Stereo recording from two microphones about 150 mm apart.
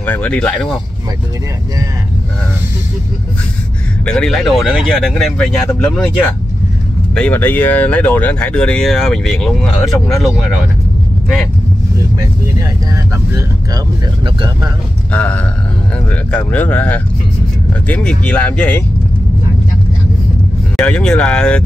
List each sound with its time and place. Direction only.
0.0 s speech: 10° left (ahead or behind)
4.0 s speech: 5° left (ahead or behind)
7.2 s speech: 10° left (ahead or behind)
12.2 s speech: 20° right (ahead or behind)
14.2 s speech: 35° right (ahead or behind)
15.1 s speech: 10° left (ahead or behind)
20.7 s speech: 5° left (ahead or behind)